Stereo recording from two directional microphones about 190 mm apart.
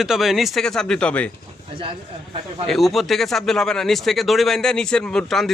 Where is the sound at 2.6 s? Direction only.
Centre (ahead or behind).